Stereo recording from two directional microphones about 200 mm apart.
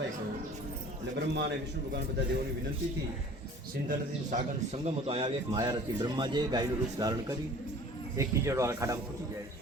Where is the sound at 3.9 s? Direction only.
35° right (ahead or behind).